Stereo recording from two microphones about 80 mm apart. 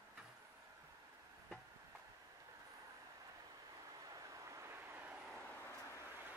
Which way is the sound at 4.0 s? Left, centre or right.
Right.